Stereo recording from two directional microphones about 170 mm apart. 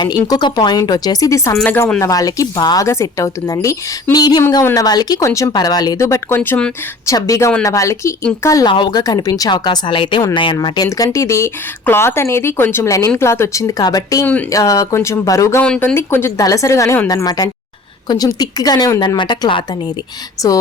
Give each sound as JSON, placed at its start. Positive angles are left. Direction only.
{"t": 0.3, "sound": "speech", "side_deg": 25}
{"t": 15.6, "sound": "a woman's voice", "side_deg": 5}